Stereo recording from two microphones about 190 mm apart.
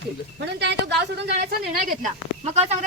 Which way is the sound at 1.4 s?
45° right (ahead or behind).